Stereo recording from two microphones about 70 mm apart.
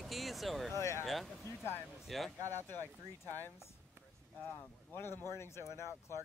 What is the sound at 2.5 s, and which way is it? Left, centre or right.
Speech, left.